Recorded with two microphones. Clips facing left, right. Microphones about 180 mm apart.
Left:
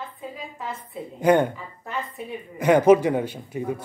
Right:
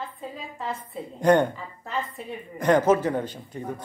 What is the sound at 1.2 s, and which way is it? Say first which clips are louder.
A woman's voice: left 1 dB; 5° left (ahead or behind).